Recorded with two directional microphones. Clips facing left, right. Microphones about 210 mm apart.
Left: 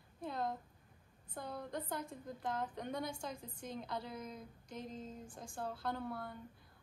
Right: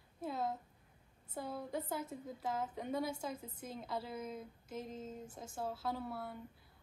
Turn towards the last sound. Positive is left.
turn(degrees=-5)  # may be behind; listen again after turning